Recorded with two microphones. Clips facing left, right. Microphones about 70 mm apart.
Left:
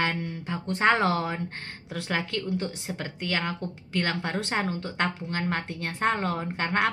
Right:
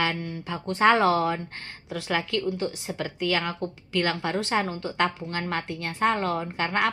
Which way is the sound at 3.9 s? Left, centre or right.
Left.